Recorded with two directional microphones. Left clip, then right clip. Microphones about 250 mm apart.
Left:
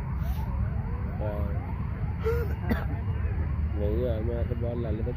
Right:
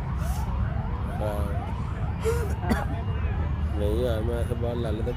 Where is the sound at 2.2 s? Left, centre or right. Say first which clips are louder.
Right 2 dB; right.